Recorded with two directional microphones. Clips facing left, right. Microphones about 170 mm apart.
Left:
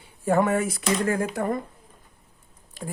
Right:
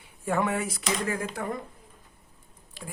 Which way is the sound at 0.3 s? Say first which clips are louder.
Left 6 dB; 45° left (ahead or behind).